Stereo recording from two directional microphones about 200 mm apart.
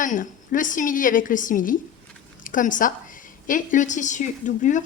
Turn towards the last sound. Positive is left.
turn(degrees=40)  # may be behind; listen again after turning